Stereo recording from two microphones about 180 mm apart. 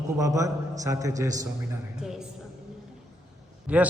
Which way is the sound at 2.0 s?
5° right (ahead or behind).